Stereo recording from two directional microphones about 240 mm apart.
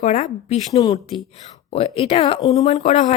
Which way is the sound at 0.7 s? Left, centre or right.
Centre.